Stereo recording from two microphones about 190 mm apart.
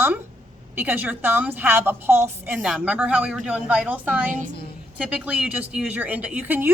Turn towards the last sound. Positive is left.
turn(degrees=-10)  # may be behind; listen again after turning